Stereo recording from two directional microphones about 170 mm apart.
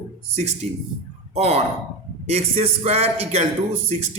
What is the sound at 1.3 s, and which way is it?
A man's voice, 40° right (ahead or behind).